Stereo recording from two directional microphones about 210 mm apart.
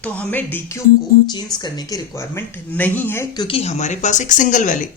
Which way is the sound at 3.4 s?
30° left (ahead or behind).